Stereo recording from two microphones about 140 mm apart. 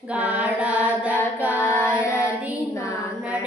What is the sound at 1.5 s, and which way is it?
Female singing, 15° left (ahead or behind).